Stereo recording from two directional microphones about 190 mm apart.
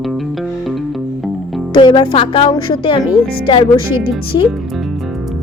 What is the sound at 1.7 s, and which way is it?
Speech, 25° left (ahead or behind).